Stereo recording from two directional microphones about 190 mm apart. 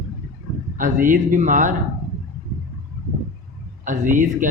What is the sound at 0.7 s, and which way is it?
Speech, 45° right (ahead or behind).